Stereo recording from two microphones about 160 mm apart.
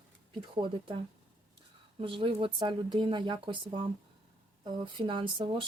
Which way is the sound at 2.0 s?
35° right (ahead or behind).